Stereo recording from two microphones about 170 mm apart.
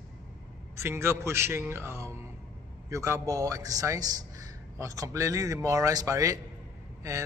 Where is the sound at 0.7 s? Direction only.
15° right (ahead or behind).